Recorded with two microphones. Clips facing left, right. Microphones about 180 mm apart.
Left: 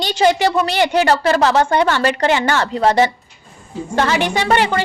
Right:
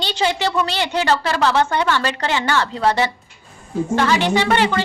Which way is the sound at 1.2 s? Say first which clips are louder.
Left 4 dB; 45° left (ahead or behind).